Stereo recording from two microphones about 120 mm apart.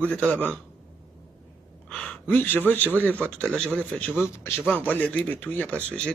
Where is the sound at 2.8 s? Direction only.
15° right (ahead or behind).